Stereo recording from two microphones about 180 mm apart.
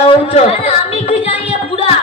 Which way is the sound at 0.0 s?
35° left (ahead or behind).